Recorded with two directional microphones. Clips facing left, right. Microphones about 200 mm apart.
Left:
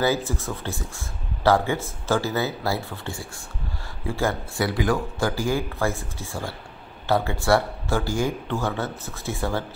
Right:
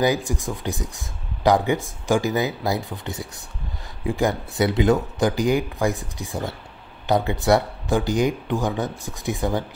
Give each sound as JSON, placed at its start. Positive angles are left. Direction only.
{"t": 0.0, "sound": "speech", "side_deg": -15}